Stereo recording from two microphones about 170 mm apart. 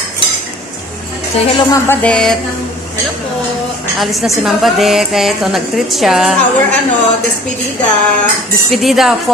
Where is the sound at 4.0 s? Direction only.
Centre (ahead or behind).